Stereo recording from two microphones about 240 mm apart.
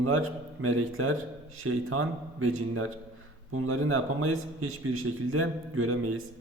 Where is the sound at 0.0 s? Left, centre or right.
Right.